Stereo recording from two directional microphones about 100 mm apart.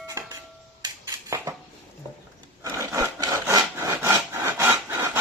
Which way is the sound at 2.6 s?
30° right (ahead or behind).